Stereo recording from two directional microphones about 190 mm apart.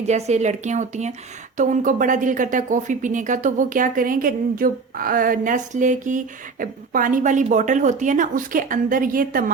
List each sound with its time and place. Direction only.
0.0 s speech: 35° right (ahead or behind)